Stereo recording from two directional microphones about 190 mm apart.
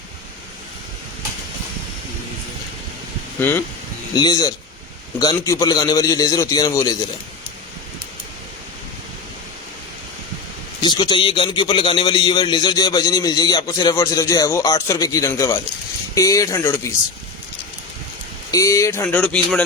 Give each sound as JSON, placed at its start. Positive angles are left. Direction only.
{"t": 4.1, "sound": "a man's voice", "side_deg": 20}
{"t": 10.8, "sound": "a man's voice", "side_deg": 20}
{"t": 18.5, "sound": "speech", "side_deg": 15}